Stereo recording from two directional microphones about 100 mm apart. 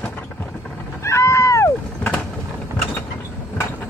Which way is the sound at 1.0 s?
30° left (ahead or behind).